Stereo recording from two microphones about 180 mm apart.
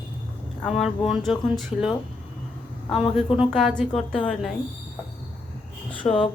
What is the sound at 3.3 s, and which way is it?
Speech, centre (ahead or behind).